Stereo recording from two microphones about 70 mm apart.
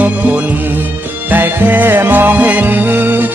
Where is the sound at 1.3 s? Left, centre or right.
Right.